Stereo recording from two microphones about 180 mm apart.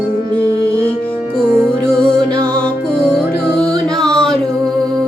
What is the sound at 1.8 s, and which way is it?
Music, 5° left (ahead or behind).